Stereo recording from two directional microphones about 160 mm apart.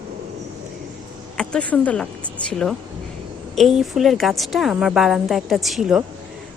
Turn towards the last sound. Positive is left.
turn(degrees=-5)  # may be behind; listen again after turning